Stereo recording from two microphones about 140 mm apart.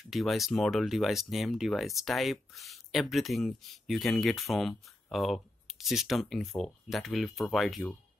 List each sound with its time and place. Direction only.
0.1 s speech: centre (ahead or behind)